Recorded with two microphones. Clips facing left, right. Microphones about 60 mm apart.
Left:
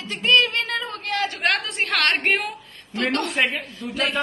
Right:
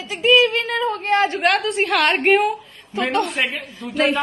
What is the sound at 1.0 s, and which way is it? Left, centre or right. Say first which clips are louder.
Speech: right 8 dB; right.